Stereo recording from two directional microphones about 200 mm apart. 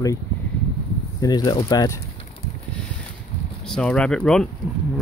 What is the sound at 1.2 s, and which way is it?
Speech, 20° left (ahead or behind).